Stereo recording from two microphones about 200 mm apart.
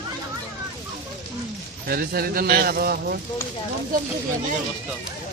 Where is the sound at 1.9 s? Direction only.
50° right (ahead or behind).